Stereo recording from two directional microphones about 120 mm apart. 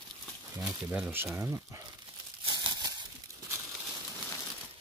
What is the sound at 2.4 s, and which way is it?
Crumpling, 35° right (ahead or behind).